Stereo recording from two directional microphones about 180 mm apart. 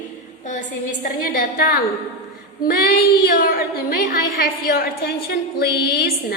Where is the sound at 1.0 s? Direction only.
55° left (ahead or behind).